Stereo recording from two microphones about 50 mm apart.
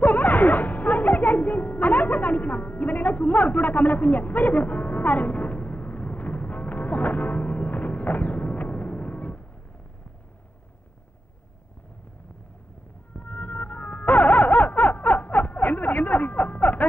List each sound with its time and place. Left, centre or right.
0.0 s music: left
13.1 s music: left